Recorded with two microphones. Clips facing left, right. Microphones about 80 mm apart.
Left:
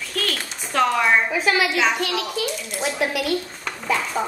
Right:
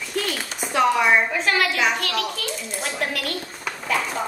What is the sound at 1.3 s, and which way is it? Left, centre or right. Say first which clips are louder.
A child's voice: left 1 dB; centre.